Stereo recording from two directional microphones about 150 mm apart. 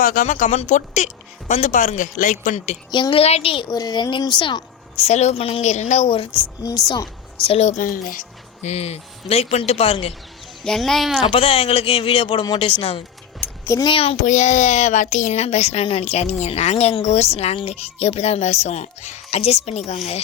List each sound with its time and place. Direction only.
0.0 s speech: 65° left (ahead or behind)
2.9 s a woman's voice: 35° left (ahead or behind)
6.3 s speech: 20° left (ahead or behind)
7.4 s speech: 45° left (ahead or behind)
10.6 s speech: 5° left (ahead or behind)
11.2 s a woman's voice: 40° left (ahead or behind)
13.4 s a sound: 20° left (ahead or behind)
13.8 s a woman's voice: 40° left (ahead or behind)
14.2 s speech: 55° left (ahead or behind)